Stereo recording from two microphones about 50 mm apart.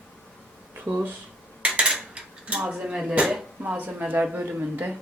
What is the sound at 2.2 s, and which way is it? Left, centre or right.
Dishes, right.